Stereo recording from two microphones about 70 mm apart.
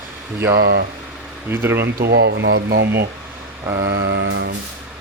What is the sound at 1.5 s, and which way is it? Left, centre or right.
Speech, right.